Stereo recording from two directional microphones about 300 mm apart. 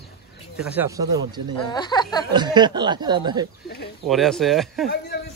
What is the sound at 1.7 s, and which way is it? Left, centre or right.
Speech, centre.